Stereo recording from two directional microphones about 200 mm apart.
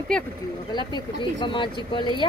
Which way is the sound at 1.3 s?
25° left (ahead or behind).